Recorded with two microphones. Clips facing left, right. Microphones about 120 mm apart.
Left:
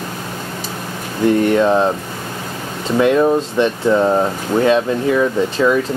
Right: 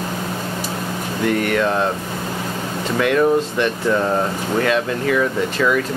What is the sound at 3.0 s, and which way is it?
Speech, 20° left (ahead or behind).